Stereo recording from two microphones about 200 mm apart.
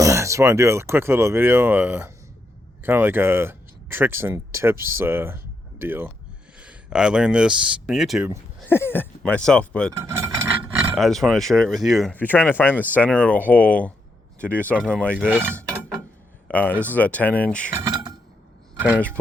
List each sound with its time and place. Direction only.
0.0 s speech: 15° right (ahead or behind)
8.7 s speech: 10° left (ahead or behind)
10.0 s cutlery: 15° right (ahead or behind)
10.9 s speech: centre (ahead or behind)
15.3 s speech: 10° right (ahead or behind)
16.5 s speech: 10° left (ahead or behind)
17.8 s a sound: 20° right (ahead or behind)
18.9 s speech: 5° left (ahead or behind)